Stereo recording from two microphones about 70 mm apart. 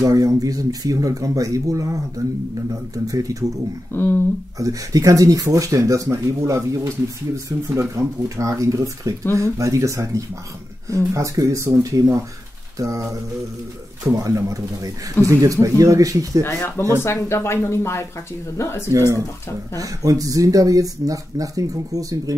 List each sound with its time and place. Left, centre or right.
0.0 s speech: right
3.9 s speech: left
4.6 s speech: right
16.4 s speech: left
18.9 s speech: right
19.8 s speech: right